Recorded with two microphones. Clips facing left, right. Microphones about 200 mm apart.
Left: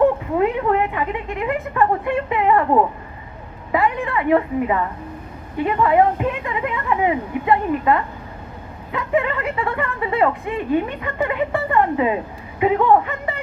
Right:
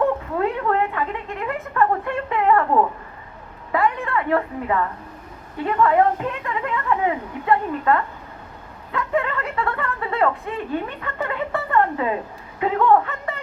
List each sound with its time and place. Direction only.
0.3 s speech: 15° left (ahead or behind)
3.7 s speech: 15° left (ahead or behind)